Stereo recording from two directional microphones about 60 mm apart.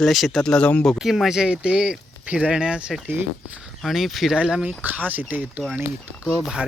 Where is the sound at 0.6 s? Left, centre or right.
Left.